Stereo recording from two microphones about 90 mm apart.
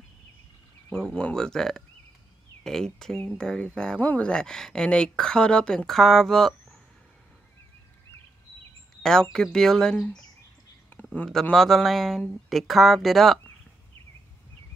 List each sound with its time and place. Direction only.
0.8 s speech: 10° left (ahead or behind)
9.0 s speech: 5° left (ahead or behind)
10.9 s a sound: 20° left (ahead or behind)
11.5 s speech: centre (ahead or behind)